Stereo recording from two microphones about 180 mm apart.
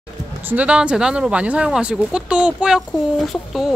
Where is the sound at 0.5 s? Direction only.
5° right (ahead or behind).